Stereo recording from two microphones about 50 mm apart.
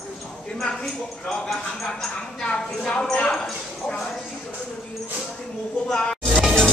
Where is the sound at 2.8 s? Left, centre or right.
Centre.